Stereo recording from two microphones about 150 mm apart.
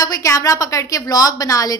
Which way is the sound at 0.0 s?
20° left (ahead or behind).